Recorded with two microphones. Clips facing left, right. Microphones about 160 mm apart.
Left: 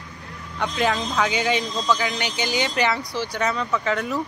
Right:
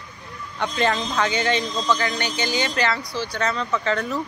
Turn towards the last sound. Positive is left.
turn(degrees=5)  # may be behind; listen again after turning